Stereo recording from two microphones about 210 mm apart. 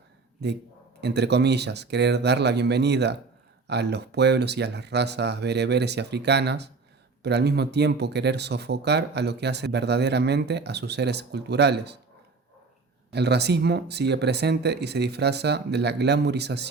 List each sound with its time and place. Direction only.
1.0 s speech: 55° right (ahead or behind)
13.1 s speech: 50° right (ahead or behind)